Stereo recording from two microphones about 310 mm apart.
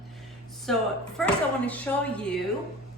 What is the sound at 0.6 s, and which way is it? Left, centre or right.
Speech, centre.